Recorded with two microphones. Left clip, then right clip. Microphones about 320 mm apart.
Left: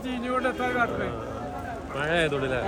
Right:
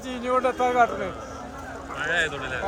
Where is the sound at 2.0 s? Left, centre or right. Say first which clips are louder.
Even; centre.